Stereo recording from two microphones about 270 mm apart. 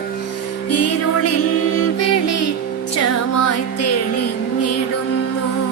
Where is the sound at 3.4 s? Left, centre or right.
Left.